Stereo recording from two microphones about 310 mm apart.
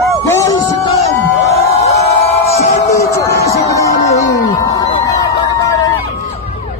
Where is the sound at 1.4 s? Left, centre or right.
Centre.